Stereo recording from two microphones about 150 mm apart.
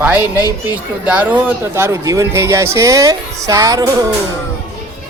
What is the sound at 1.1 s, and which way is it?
Speech, 10° right (ahead or behind).